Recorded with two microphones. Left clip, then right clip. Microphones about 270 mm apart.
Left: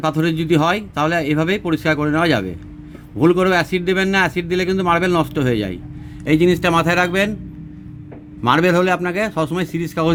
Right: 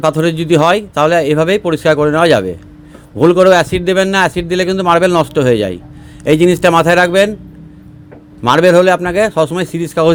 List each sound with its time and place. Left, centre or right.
0.0 s a man's voice: centre
8.4 s a man's voice: centre